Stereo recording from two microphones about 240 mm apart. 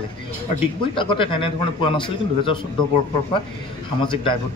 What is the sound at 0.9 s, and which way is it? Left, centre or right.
A man's voice, left.